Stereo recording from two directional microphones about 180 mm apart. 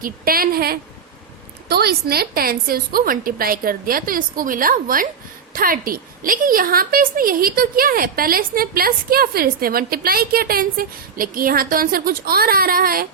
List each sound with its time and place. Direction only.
0.0 s a woman's voice: 55° right (ahead or behind)